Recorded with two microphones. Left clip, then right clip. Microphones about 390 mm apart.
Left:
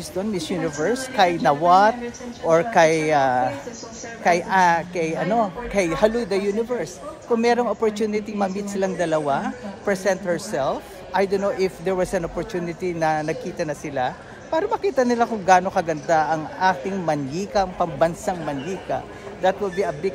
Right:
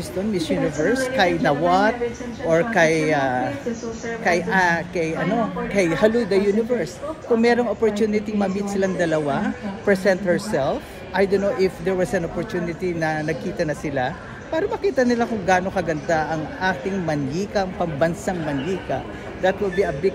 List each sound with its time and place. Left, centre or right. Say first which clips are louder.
0.3 s a man's voice: right 5 dB; centre